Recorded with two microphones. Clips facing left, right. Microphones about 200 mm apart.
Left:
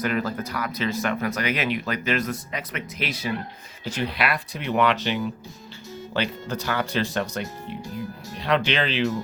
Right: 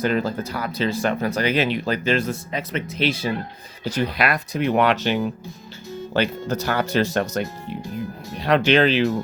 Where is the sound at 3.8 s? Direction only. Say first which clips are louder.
Right 4 dB; 40° right (ahead or behind).